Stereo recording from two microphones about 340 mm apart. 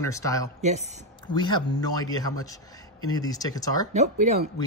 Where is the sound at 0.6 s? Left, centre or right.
Centre.